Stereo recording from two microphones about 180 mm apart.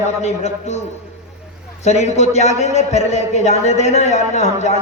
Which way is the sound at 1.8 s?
40° left (ahead or behind).